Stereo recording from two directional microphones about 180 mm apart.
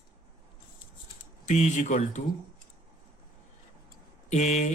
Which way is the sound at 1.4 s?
40° left (ahead or behind).